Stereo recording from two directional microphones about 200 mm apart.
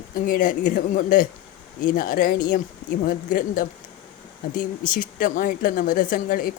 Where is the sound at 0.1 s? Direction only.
45° left (ahead or behind).